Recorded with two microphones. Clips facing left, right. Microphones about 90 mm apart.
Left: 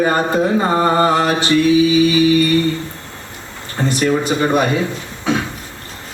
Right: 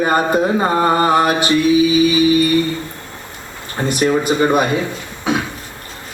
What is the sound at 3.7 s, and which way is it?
Music, 15° right (ahead or behind).